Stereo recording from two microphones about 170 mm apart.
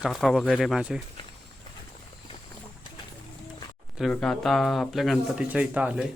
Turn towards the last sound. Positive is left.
turn(degrees=-5)  # may be behind; listen again after turning